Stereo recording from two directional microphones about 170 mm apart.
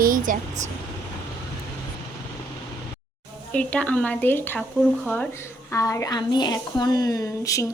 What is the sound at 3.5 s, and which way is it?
A woman's voice, 5° left (ahead or behind).